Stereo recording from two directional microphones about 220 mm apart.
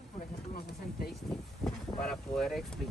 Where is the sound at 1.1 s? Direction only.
Centre (ahead or behind).